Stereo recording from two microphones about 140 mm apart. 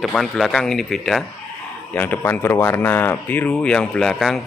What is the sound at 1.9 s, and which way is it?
Speech, 15° left (ahead or behind).